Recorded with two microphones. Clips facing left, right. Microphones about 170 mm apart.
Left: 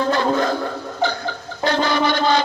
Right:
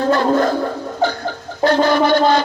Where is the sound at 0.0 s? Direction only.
45° right (ahead or behind).